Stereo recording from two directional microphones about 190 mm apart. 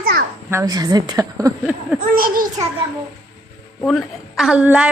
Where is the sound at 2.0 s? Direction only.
50° right (ahead or behind).